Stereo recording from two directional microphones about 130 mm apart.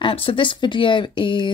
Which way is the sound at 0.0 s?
45° left (ahead or behind).